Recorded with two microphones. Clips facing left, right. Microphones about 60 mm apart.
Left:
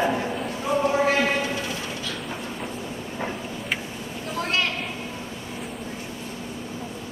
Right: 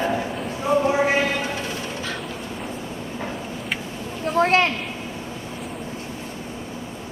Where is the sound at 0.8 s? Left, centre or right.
Centre.